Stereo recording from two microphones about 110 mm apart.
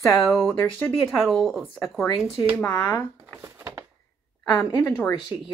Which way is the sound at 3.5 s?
25° right (ahead or behind).